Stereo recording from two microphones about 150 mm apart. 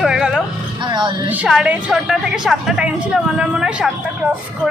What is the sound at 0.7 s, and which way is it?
Music, 30° right (ahead or behind).